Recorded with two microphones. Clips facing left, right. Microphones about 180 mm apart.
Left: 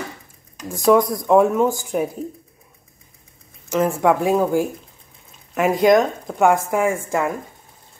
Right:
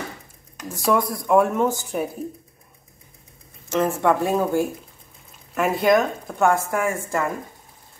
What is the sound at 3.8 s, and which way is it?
Speech, 10° left (ahead or behind).